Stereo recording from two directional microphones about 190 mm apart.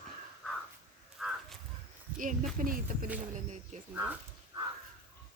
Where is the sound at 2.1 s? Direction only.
45° right (ahead or behind).